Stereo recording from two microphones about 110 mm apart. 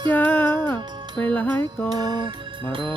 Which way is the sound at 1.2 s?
15° left (ahead or behind).